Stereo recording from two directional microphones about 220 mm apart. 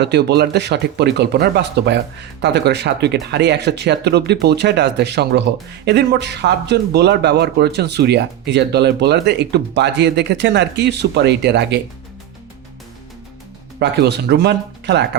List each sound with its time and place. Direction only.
0.0 s speech: 50° right (ahead or behind)
13.7 s speech: 50° right (ahead or behind)